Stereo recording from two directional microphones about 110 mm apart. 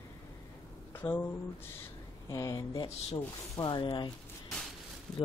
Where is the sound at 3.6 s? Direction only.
45° left (ahead or behind).